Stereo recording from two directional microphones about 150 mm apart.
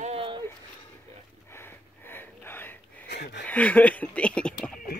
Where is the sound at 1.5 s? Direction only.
15° left (ahead or behind).